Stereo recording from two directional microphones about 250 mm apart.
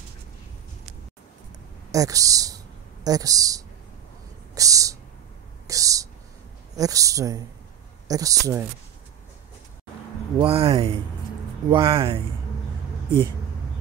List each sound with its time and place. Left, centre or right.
1.9 s a woman's voice: centre
10.4 s speech: right